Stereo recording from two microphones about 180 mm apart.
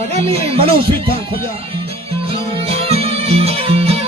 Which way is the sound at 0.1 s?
35° right (ahead or behind).